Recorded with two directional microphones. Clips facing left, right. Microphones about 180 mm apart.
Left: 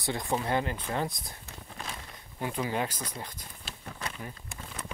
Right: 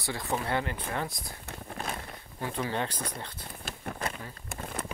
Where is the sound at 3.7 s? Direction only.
50° right (ahead or behind).